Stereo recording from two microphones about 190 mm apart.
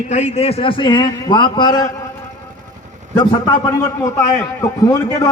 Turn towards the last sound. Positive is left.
turn(degrees=15)  # may be behind; listen again after turning